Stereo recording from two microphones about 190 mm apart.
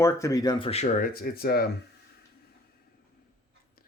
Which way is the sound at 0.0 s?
15° left (ahead or behind).